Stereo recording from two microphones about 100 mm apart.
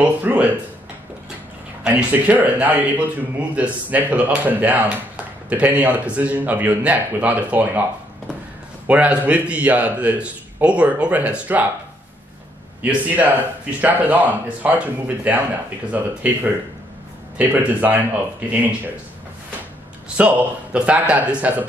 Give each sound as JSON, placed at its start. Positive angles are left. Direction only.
{"t": 0.0, "sound": "a sound", "side_deg": -15}
{"t": 1.9, "sound": "speech", "side_deg": -15}
{"t": 8.8, "sound": "speech", "side_deg": -15}
{"t": 12.8, "sound": "speech", "side_deg": -15}
{"t": 17.4, "sound": "speech", "side_deg": -15}
{"t": 20.2, "sound": "speech", "side_deg": -15}